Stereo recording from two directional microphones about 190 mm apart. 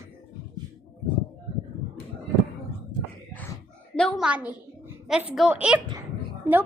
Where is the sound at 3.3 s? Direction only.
10° left (ahead or behind).